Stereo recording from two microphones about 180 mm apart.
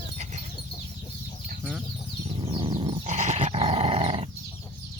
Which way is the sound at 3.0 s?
40° right (ahead or behind).